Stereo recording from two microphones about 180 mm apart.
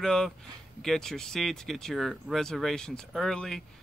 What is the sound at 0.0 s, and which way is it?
Speech, 5° left (ahead or behind).